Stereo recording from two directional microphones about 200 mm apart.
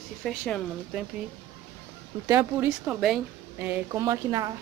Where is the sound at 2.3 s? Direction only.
15° right (ahead or behind).